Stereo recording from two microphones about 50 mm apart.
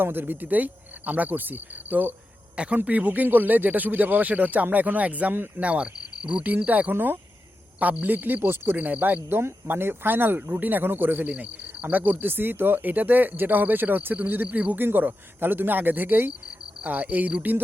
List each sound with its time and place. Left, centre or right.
0.0 s speech: right
5.5 s speech: right
8.0 s speech: right
9.4 s speech: right
11.3 s speech: right
14.8 s speech: right